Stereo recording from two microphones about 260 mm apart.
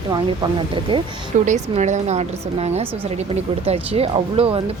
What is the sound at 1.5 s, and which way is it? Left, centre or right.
Speech, right.